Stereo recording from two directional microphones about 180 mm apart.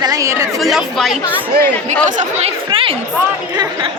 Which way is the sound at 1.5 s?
65° right (ahead or behind).